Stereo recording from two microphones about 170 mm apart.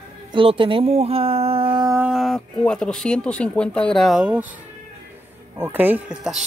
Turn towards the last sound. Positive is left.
turn(degrees=-5)  # may be behind; listen again after turning